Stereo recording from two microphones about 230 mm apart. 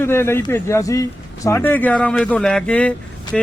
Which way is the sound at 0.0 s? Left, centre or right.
Centre.